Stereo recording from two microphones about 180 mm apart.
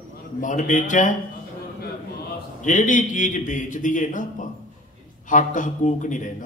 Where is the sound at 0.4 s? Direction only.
45° left (ahead or behind).